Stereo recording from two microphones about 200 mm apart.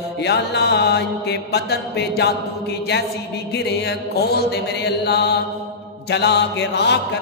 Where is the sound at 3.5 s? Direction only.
55° left (ahead or behind).